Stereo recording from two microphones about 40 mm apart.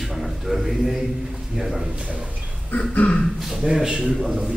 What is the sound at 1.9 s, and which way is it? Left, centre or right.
Speech, right.